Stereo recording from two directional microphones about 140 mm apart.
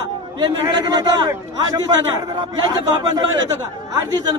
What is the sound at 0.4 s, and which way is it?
Speech, 30° right (ahead or behind).